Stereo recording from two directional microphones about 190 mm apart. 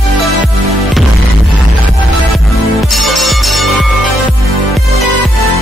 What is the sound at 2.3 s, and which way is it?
Music, centre (ahead or behind).